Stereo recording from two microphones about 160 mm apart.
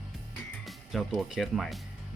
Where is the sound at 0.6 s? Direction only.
Centre (ahead or behind).